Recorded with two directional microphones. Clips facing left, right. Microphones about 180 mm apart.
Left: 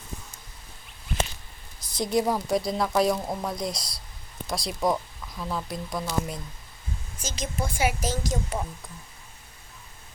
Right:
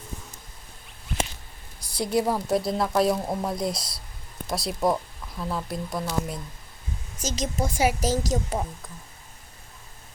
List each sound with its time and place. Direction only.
2.0 s a woman's voice: 10° right (ahead or behind)
7.2 s a woman's voice: 40° right (ahead or behind)